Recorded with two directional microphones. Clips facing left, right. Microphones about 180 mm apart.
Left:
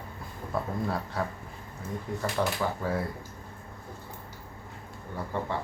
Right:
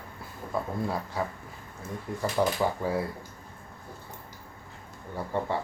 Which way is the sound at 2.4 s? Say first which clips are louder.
Right 3 dB; 10° right (ahead or behind).